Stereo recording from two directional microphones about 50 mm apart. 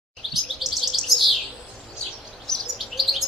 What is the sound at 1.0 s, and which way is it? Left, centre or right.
Bird, centre.